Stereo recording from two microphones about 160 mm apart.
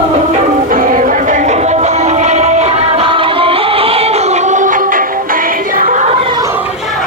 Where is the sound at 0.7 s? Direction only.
55° right (ahead or behind).